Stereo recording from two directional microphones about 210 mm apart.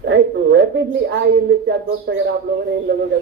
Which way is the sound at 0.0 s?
50° right (ahead or behind).